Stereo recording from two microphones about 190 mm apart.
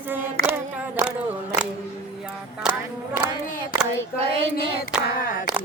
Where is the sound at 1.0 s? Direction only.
15° right (ahead or behind).